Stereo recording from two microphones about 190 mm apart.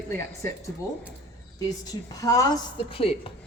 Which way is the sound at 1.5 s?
20° left (ahead or behind).